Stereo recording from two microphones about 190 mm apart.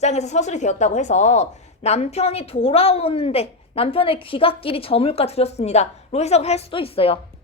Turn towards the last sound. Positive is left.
turn(degrees=30)  # may be behind; listen again after turning